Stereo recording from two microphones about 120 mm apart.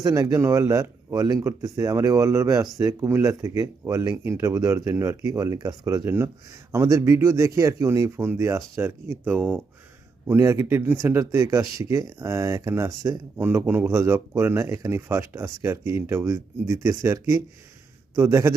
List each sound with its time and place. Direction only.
0.0 s speech: 30° right (ahead or behind)